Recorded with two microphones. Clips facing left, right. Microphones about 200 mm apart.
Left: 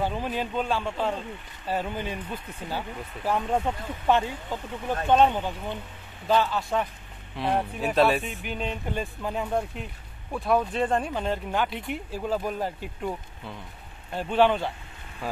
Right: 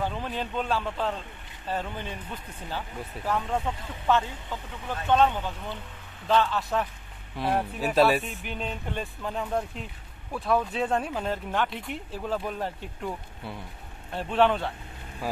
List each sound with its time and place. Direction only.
0.0 s speech: 10° left (ahead or behind)
4.1 s speech: 15° left (ahead or behind)
14.1 s speech: centre (ahead or behind)